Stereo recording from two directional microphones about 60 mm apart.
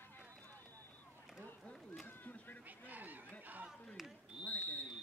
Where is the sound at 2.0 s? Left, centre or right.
Left.